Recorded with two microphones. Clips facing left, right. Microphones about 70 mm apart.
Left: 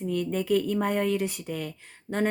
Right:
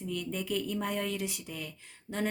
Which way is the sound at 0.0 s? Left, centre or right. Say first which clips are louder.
Left 8 dB; left.